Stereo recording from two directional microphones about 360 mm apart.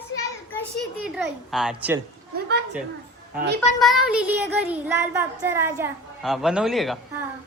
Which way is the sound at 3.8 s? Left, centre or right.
Centre.